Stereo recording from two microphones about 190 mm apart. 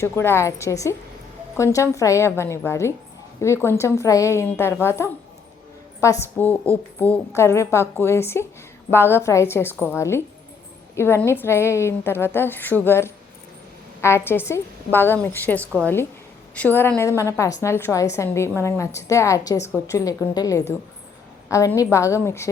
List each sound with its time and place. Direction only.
0.0 s a woman's voice: 15° left (ahead or behind)
15.6 s a woman's voice: 10° right (ahead or behind)
16.6 s a woman's voice: 10° left (ahead or behind)